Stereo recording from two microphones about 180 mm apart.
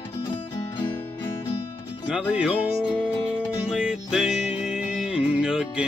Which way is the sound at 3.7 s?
5° right (ahead or behind).